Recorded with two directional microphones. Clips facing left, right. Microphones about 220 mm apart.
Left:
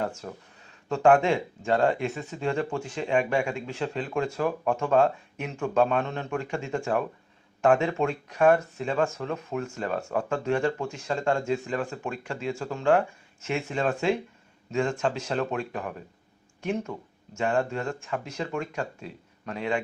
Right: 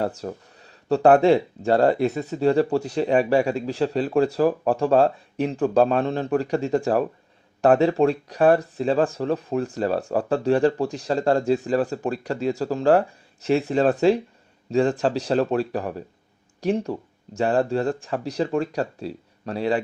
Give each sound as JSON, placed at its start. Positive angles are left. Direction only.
{"t": 0.0, "sound": "speech", "side_deg": -35}